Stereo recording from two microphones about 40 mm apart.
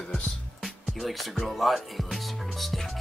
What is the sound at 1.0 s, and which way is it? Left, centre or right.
Speech, centre.